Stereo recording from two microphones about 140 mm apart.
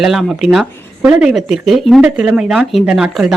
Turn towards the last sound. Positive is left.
turn(degrees=-5)  # may be behind; listen again after turning